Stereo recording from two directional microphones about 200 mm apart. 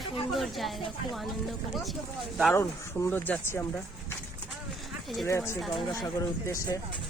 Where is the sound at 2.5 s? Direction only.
10° left (ahead or behind).